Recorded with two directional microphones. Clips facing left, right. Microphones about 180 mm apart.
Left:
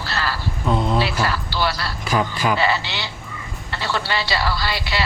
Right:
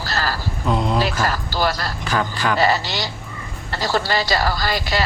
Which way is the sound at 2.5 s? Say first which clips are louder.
Right 2 dB; 40° right (ahead or behind).